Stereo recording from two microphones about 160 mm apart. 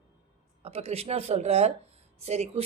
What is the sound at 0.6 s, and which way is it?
A woman's voice, 40° right (ahead or behind).